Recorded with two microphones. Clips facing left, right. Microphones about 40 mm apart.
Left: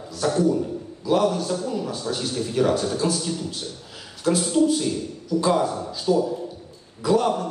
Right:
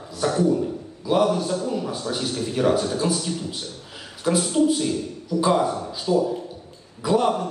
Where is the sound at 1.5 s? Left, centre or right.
Right.